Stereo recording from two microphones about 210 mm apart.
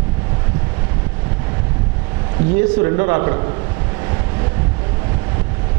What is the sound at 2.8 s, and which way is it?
Speech, 20° right (ahead or behind).